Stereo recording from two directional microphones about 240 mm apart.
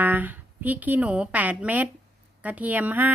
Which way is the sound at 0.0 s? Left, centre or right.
Centre.